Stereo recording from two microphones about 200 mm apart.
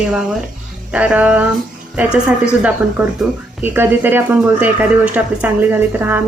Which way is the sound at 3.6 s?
10° right (ahead or behind).